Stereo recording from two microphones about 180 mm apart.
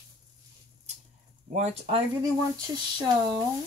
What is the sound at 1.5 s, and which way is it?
Speech, 35° right (ahead or behind).